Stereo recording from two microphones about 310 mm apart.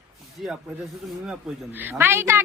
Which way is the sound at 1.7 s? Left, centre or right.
Centre.